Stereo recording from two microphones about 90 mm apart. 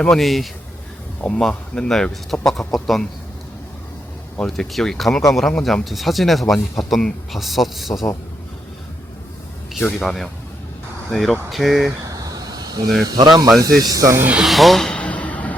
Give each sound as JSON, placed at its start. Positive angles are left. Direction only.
{"t": 0.0, "sound": "speech", "side_deg": 5}
{"t": 4.4, "sound": "speech", "side_deg": 5}
{"t": 10.0, "sound": "speech", "side_deg": 5}
{"t": 12.0, "sound": "a sound", "side_deg": -40}
{"t": 13.6, "sound": "speech", "side_deg": -40}
{"t": 14.4, "sound": "a sound", "side_deg": 0}